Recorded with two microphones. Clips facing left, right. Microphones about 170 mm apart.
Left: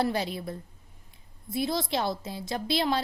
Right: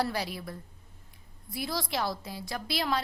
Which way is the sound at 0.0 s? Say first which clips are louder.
Left 4 dB; 25° left (ahead or behind).